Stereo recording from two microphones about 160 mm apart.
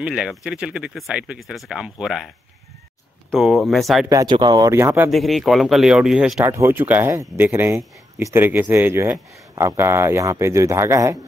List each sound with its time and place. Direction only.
0.0 s speech: 5° right (ahead or behind)
4.1 s speech: 25° right (ahead or behind)
5.1 s speech: centre (ahead or behind)
6.4 s speech: 15° right (ahead or behind)